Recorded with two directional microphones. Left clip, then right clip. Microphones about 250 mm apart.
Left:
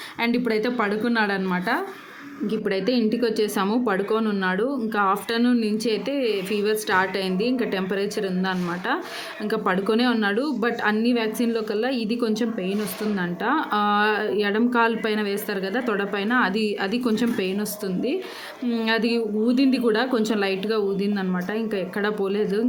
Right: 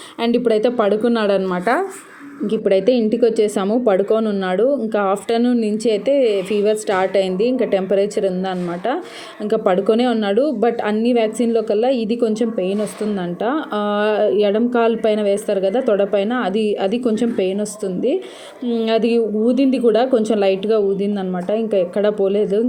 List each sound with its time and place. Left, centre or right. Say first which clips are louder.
0.4 s speech: right 8 dB; centre